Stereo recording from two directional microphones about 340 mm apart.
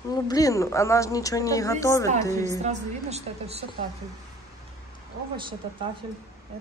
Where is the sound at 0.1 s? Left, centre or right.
Centre.